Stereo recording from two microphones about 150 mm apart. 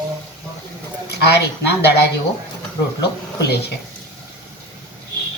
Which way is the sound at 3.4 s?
90° left.